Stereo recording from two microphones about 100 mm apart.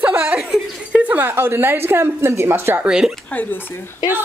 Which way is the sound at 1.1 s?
20° right (ahead or behind).